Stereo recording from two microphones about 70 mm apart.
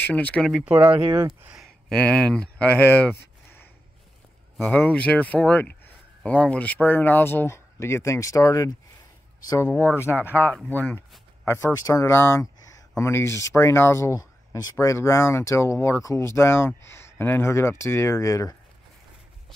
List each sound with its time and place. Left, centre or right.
0.0 s speech: left
0.7 s speech: centre
1.9 s speech: centre
4.7 s speech: left
9.7 s speech: left
11.0 s a sound: left
11.7 s speech: left
12.1 s speech: left